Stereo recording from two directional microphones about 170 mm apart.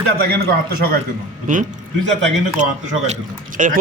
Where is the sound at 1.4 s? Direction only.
50° right (ahead or behind).